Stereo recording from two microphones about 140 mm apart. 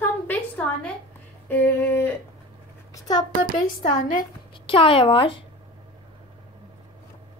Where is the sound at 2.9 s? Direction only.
30° left (ahead or behind).